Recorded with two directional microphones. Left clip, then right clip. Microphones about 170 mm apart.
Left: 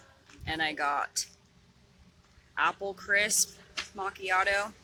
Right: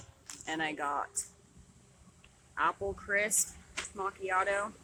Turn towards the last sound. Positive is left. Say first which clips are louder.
# left 4 dB
turn(degrees=5)  # may be behind; listen again after turning